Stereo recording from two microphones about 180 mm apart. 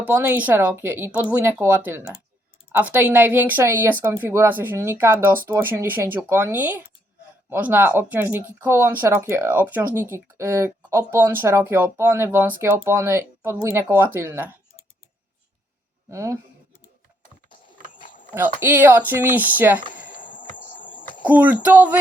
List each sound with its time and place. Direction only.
0.0 s speech: 10° right (ahead or behind)
16.0 s speech: 15° right (ahead or behind)
17.9 s dog: 45° left (ahead or behind)
18.3 s speech: 10° right (ahead or behind)
20.1 s a sound: 45° left (ahead or behind)
21.2 s speech: 10° right (ahead or behind)